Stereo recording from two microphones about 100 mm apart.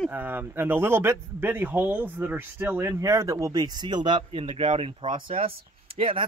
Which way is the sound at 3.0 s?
30° right (ahead or behind).